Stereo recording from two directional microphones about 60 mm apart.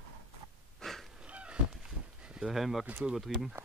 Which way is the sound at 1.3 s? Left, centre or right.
Centre.